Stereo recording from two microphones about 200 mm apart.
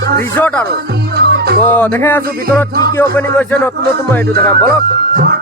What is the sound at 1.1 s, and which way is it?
Music, 55° right (ahead or behind).